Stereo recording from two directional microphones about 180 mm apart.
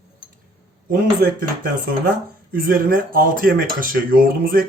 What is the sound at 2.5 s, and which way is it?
Speech, 50° right (ahead or behind).